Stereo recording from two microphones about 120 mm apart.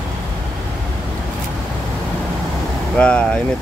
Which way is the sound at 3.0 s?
10° left (ahead or behind).